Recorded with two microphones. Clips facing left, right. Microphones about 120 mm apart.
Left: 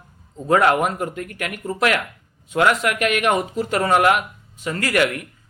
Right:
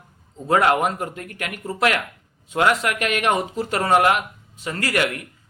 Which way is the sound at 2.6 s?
35° right (ahead or behind).